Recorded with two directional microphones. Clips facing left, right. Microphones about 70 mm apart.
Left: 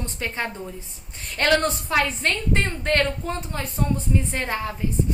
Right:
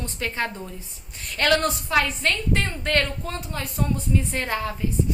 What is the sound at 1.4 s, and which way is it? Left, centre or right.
A woman's voice, left.